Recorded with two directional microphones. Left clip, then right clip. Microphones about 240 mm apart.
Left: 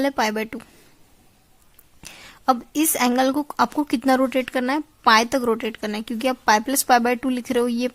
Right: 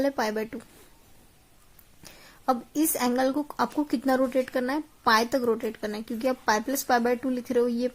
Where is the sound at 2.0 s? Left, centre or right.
Left.